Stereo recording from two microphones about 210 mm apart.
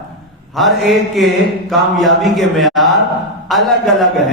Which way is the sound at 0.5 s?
Centre (ahead or behind).